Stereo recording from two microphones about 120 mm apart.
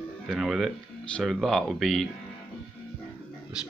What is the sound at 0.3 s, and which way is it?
Speech, centre (ahead or behind).